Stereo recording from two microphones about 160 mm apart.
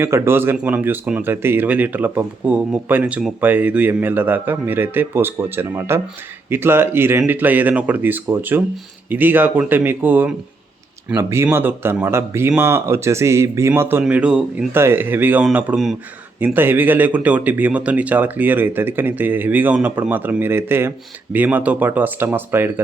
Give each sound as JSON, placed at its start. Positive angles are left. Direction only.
{"t": 0.0, "sound": "speech", "side_deg": -15}